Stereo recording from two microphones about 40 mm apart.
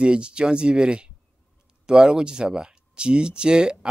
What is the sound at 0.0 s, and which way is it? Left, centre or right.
Speech, right.